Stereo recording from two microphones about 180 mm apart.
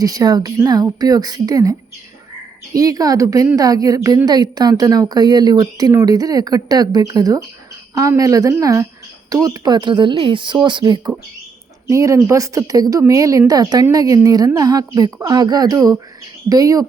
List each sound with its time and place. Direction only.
0.0 s speech: 20° right (ahead or behind)
2.7 s speech: 20° right (ahead or behind)